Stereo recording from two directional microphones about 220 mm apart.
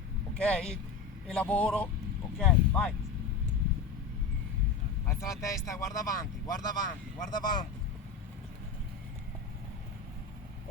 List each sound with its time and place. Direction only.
0.3 s a man's voice: 5° left (ahead or behind)
5.0 s speech: 15° left (ahead or behind)